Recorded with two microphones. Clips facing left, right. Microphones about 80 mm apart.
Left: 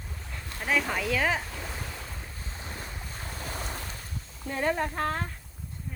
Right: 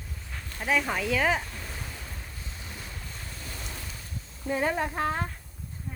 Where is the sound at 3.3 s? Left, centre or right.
Left.